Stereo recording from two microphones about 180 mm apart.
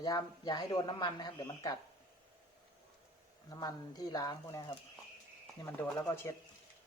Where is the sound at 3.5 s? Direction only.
20° left (ahead or behind).